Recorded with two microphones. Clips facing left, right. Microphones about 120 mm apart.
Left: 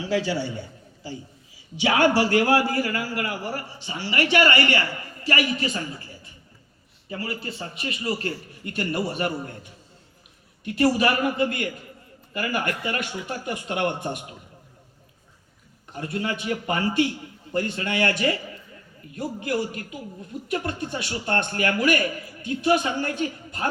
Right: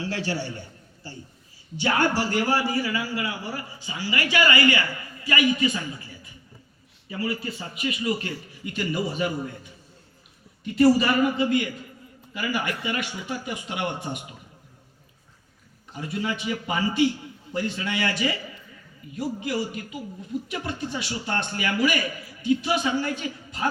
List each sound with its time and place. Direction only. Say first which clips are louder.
1.0 s a man's voice: left 5 dB; 90° left; by 6.0 s 35° left (ahead or behind)
7.1 s a man's voice: right 2 dB; 35° left (ahead or behind); by 9.6 s 60° left (ahead or behind)
10.6 s a man's voice: right 2 dB; 60° left (ahead or behind)
15.9 s a man's voice: left 1 dB; 55° left (ahead or behind)